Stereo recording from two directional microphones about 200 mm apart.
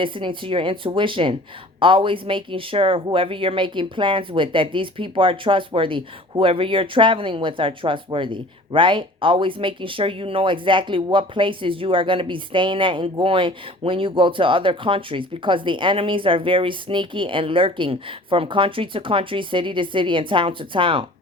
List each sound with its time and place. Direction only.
0.0 s speech: 25° right (ahead or behind)